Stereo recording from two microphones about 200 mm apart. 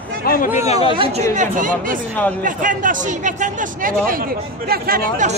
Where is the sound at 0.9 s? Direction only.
30° right (ahead or behind).